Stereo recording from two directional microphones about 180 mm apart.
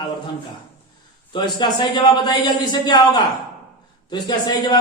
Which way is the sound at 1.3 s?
25° left (ahead or behind).